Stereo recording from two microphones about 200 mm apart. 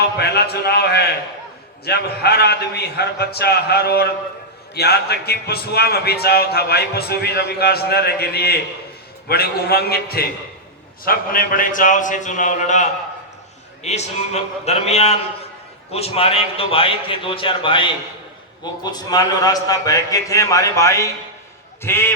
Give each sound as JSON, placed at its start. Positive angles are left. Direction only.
{"t": 0.2, "sound": "a man's voice", "side_deg": 55}